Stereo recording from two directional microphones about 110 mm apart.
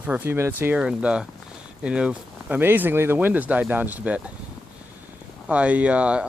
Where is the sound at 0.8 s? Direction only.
10° right (ahead or behind).